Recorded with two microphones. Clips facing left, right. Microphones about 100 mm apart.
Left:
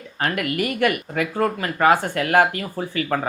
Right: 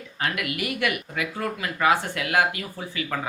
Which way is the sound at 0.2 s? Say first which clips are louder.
Left 5 dB; 45° left (ahead or behind).